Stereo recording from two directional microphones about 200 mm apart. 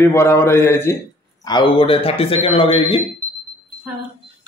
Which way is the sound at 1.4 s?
25° left (ahead or behind).